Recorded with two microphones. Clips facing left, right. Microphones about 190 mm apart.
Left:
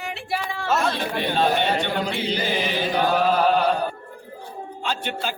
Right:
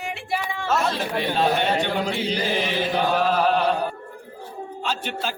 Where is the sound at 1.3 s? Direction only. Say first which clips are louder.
Even; centre (ahead or behind).